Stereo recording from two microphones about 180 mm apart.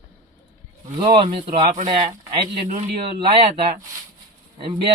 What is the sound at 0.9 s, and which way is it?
Speech, 30° right (ahead or behind).